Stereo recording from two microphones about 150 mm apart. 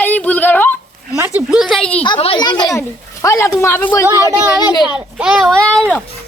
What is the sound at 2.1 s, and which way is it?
Speech, 40° left (ahead or behind).